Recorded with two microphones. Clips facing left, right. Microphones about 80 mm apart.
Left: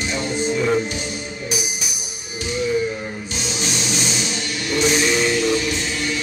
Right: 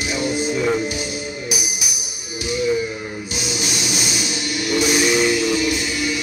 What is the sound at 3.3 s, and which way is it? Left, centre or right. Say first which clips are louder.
Music: even; centre.